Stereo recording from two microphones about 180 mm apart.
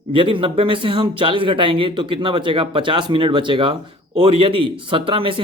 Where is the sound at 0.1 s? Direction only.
30° right (ahead or behind).